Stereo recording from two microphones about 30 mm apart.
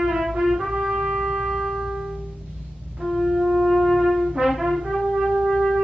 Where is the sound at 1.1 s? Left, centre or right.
Centre.